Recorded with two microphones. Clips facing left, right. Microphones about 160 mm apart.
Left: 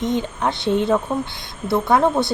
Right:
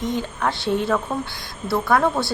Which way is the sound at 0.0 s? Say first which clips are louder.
Left 3 dB; 20° left (ahead or behind).